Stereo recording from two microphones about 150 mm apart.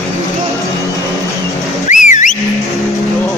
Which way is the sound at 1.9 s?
55° left (ahead or behind).